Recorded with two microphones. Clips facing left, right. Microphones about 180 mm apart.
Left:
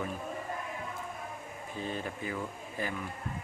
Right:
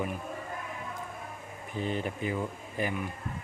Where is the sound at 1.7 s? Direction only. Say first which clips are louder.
Right 5 dB; 20° right (ahead or behind).